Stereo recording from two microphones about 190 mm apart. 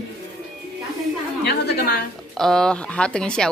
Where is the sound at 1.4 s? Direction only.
60° left (ahead or behind).